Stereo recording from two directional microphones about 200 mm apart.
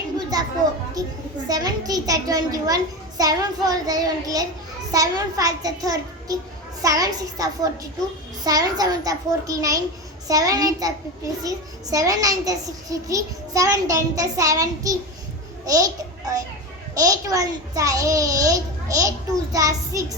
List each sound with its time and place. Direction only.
0.3 s a child's voice: 20° right (ahead or behind)